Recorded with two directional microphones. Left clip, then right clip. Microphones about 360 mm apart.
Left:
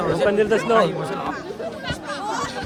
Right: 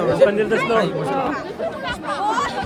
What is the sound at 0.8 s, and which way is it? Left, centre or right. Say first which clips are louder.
Speech: left 1 dB; centre.